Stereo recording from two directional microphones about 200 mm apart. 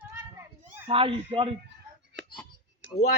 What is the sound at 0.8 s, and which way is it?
Speech, 25° right (ahead or behind).